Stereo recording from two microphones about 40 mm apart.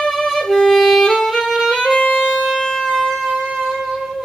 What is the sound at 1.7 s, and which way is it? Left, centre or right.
Music, centre.